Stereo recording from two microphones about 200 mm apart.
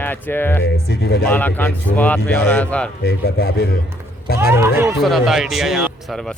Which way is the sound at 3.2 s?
50° left (ahead or behind).